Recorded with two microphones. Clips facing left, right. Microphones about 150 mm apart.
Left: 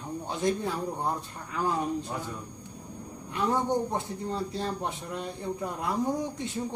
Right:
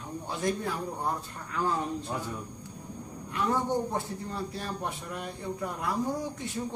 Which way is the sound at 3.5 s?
20° left (ahead or behind).